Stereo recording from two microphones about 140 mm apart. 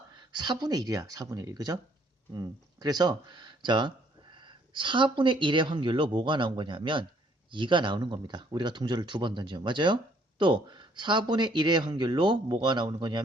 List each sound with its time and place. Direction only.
0.2 s speech: 35° right (ahead or behind)